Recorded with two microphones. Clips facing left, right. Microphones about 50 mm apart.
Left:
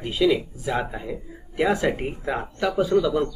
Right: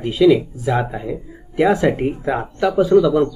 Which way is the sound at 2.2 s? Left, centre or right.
Right.